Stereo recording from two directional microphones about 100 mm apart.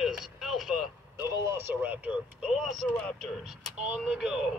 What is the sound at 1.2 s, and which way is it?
Speech, 30° right (ahead or behind).